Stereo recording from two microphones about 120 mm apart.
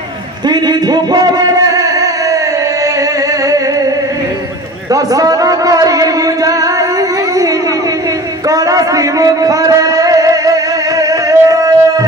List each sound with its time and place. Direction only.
0.5 s a man's voice: 35° right (ahead or behind)
4.9 s music: 30° right (ahead or behind)
8.5 s a sound: 30° right (ahead or behind)